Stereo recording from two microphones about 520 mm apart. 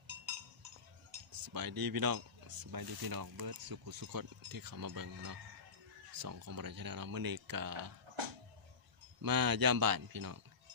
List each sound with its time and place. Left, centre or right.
1.3 s speech: right
9.2 s speech: right